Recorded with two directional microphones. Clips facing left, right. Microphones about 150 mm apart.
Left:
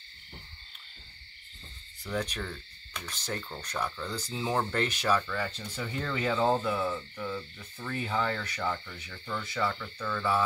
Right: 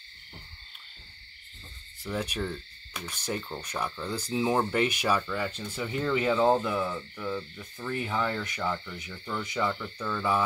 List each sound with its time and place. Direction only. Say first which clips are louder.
2.0 s speech: right 2 dB; 10° right (ahead or behind)
7.7 s speech: right 1 dB; 15° right (ahead or behind)